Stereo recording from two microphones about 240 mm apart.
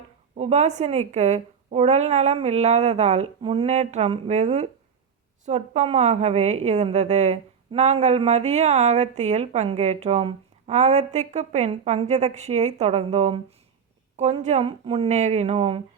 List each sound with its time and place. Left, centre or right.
0.3 s a woman's voice: right